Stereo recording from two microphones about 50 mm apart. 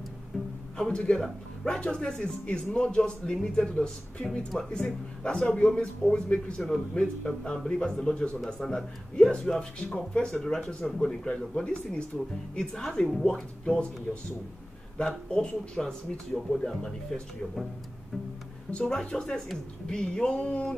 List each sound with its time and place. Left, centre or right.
0.7 s a man's voice: centre
11.0 s speech: centre
13.2 s speech: centre
14.1 s speech: centre
15.0 s speech: centre
18.7 s speech: left